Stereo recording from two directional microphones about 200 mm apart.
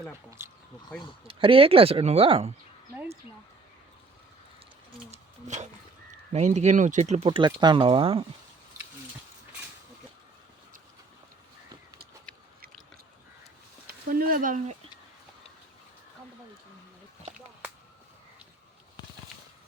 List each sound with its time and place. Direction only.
0.3 s speech: 10° right (ahead or behind)
1.3 s speech: 25° right (ahead or behind)
5.1 s a sound: 35° right (ahead or behind)
6.3 s speech: 35° right (ahead or behind)
12.3 s chewing: 5° left (ahead or behind)
13.8 s speech: 45° right (ahead or behind)